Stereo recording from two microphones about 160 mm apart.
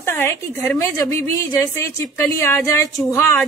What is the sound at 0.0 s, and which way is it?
A woman's voice, 15° left (ahead or behind).